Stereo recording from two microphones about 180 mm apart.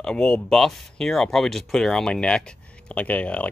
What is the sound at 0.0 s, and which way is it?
Speech, 5° left (ahead or behind).